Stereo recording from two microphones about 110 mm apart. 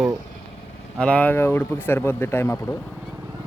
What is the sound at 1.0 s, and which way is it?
Speech, 10° left (ahead or behind).